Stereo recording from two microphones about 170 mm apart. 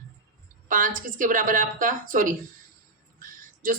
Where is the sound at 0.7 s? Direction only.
50° right (ahead or behind).